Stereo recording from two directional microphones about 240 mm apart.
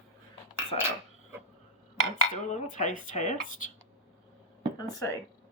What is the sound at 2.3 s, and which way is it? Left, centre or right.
Speech, left.